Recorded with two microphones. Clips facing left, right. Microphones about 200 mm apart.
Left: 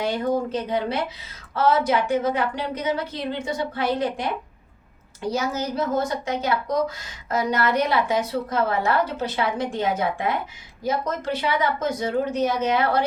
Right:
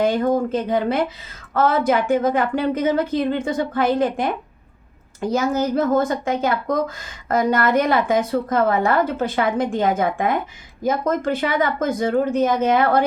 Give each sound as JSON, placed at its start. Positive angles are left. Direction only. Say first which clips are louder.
{"t": 0.0, "sound": "a woman's voice", "louder": "right 5 dB", "side_deg": -50}